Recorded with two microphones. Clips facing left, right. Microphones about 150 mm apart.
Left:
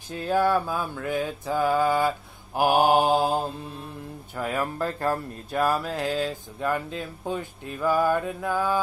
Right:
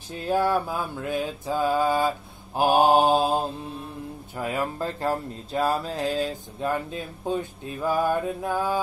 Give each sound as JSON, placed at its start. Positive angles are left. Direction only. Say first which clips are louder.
{"t": 0.3, "sound": "speech", "louder": "left 1 dB", "side_deg": -20}